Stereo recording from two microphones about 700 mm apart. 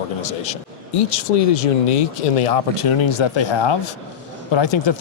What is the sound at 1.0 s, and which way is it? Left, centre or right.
Speech, left.